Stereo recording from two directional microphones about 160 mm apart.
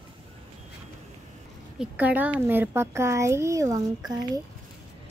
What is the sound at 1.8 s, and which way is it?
Speech, 10° right (ahead or behind).